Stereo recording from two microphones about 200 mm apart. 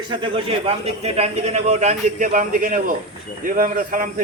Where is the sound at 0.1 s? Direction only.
25° right (ahead or behind).